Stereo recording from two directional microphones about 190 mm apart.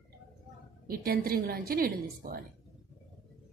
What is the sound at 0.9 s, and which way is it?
A woman's voice, 50° right (ahead or behind).